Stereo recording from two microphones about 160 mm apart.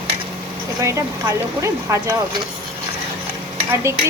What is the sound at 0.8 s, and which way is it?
Speech, 20° right (ahead or behind).